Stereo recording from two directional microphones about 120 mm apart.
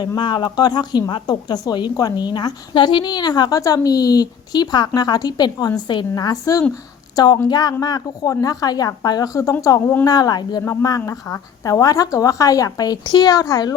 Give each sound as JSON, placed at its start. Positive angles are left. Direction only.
{"t": 0.2, "sound": "a woman's voice", "side_deg": 40}